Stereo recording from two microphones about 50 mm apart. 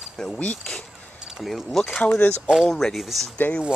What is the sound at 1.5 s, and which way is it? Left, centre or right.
Speech, centre.